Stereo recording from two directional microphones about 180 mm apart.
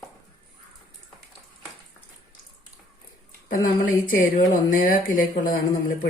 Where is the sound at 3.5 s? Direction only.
50° left (ahead or behind).